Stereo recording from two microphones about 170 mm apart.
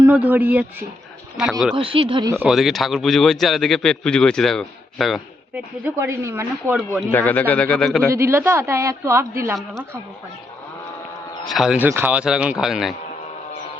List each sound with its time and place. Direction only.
0.0 s a woman's voice: 10° right (ahead or behind)
1.7 s speech: 30° right (ahead or behind)
2.4 s speech: centre (ahead or behind)
7.1 s speech: 10° left (ahead or behind)
8.1 s a woman's voice: 15° right (ahead or behind)
9.6 s speech: 5° left (ahead or behind)
11.4 s speech: centre (ahead or behind)